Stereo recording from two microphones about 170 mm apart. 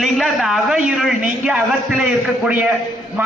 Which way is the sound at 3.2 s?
10° right (ahead or behind).